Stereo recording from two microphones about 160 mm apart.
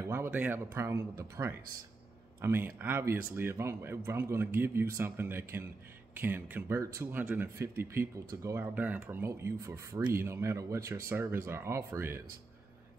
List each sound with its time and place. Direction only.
0.0 s speech: 15° right (ahead or behind)